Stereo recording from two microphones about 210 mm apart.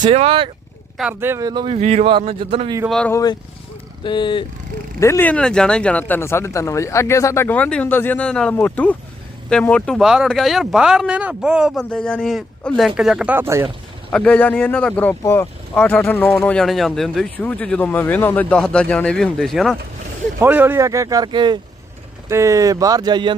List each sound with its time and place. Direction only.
0.0 s speech: 25° right (ahead or behind)
0.9 s speech: 5° right (ahead or behind); by 2.7 s 25° right (ahead or behind)
2.9 s speech: 5° left (ahead or behind)
4.0 s speech: 20° left (ahead or behind); by 13.7 s 10° right (ahead or behind)
14.1 s speech: 5° left (ahead or behind); by 23.3 s 20° right (ahead or behind)